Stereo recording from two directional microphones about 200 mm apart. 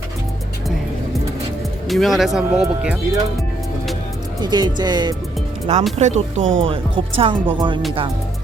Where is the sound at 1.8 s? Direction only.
Centre (ahead or behind).